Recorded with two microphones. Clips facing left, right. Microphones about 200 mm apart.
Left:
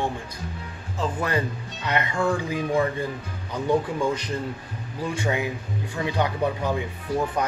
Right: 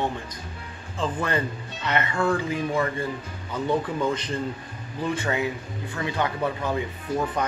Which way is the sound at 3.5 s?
10° left (ahead or behind).